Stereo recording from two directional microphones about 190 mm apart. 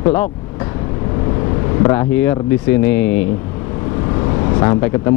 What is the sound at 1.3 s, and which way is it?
Vehicle, 25° left (ahead or behind).